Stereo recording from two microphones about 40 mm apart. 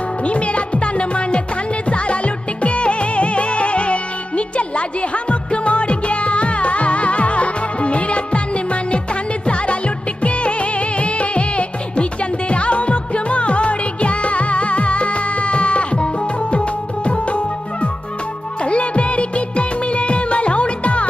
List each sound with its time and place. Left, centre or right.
0.3 s music: left
17.1 s music: left